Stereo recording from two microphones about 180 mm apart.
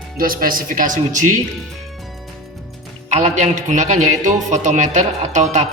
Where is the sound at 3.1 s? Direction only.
40° right (ahead or behind).